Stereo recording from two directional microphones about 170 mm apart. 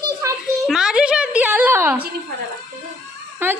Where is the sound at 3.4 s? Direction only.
15° right (ahead or behind).